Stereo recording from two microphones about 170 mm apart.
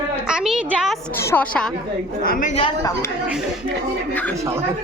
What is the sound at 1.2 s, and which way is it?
Speech, 10° left (ahead or behind).